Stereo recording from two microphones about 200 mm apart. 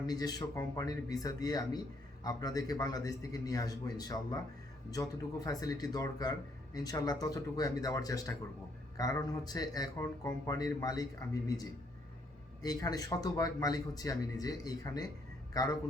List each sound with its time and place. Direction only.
0.0 s speech: 20° left (ahead or behind)
12.6 s speech: 20° left (ahead or behind)